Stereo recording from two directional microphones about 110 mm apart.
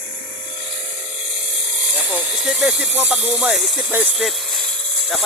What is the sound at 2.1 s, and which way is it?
Hiss, 10° right (ahead or behind).